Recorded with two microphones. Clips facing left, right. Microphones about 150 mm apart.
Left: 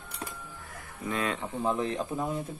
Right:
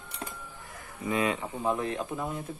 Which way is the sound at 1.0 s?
10° right (ahead or behind).